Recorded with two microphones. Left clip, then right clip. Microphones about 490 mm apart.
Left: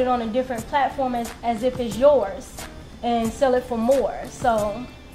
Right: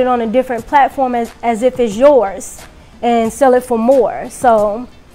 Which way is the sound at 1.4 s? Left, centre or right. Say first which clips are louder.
Right 10 dB; right.